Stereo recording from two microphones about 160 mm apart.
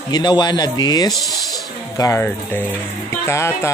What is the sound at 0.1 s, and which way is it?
A man's voice, 25° left (ahead or behind).